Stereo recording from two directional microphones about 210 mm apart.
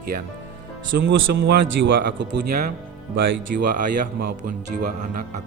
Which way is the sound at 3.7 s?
40° right (ahead or behind).